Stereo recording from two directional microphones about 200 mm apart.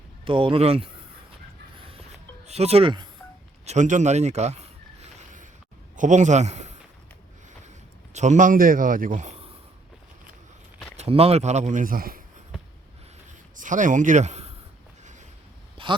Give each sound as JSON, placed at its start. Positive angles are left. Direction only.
{"t": 0.3, "sound": "speech", "side_deg": -25}
{"t": 2.5, "sound": "speech", "side_deg": -30}
{"t": 3.7, "sound": "a sound", "side_deg": -35}
{"t": 6.0, "sound": "speech", "side_deg": -35}
{"t": 8.1, "sound": "a man's voice", "side_deg": -35}
{"t": 10.9, "sound": "speech", "side_deg": -30}
{"t": 13.6, "sound": "speech", "side_deg": -40}
{"t": 15.8, "sound": "a sound", "side_deg": -25}